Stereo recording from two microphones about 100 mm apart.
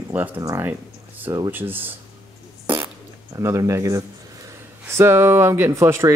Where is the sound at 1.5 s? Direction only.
20° right (ahead or behind).